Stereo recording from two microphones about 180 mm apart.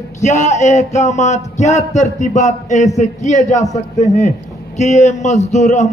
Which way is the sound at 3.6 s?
20° left (ahead or behind).